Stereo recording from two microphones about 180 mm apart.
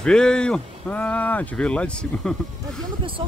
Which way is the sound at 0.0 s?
5° left (ahead or behind).